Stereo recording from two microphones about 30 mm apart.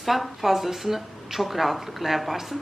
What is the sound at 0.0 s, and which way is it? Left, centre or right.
Speech, centre.